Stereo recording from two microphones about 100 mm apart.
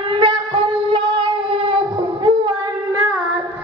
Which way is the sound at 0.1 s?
60° right (ahead or behind).